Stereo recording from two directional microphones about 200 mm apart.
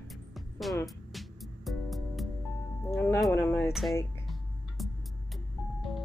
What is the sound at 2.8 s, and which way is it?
Music, 10° left (ahead or behind).